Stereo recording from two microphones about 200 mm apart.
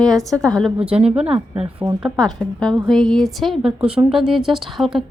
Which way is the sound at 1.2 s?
30° right (ahead or behind).